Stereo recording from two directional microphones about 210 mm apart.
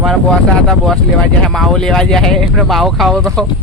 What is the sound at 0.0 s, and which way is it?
A man's voice, centre (ahead or behind).